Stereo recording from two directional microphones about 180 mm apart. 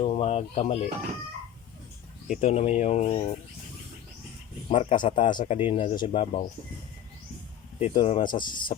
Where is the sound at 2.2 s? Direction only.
45° left (ahead or behind).